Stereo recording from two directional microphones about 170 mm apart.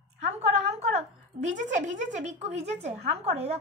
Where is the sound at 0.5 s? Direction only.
40° right (ahead or behind).